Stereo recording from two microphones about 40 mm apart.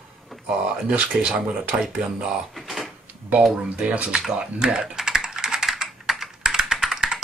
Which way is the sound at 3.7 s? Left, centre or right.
Right.